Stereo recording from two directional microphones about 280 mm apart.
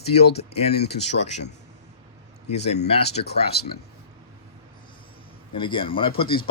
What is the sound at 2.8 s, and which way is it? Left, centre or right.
Speech, left.